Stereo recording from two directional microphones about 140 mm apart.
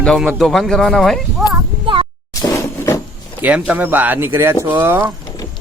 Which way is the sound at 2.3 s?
25° left (ahead or behind).